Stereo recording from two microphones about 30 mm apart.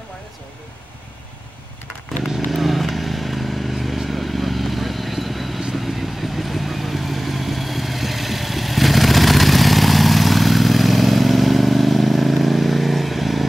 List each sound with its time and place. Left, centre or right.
2.2 s vehicle: centre